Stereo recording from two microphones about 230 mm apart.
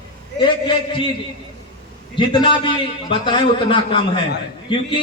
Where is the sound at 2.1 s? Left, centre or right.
Left.